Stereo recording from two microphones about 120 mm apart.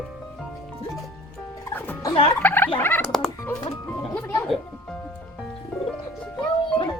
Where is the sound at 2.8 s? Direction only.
20° left (ahead or behind).